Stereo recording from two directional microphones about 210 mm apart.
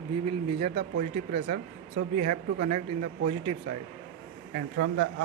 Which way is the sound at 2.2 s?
30° right (ahead or behind).